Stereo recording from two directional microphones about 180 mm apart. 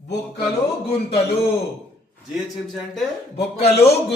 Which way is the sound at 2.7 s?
Centre (ahead or behind).